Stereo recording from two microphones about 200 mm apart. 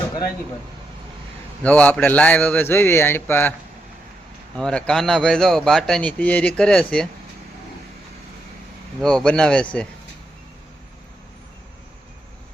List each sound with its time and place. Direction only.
1.6 s a man's voice: 5° left (ahead or behind)
4.5 s a man's voice: 5° left (ahead or behind)
9.0 s a man's voice: 5° left (ahead or behind)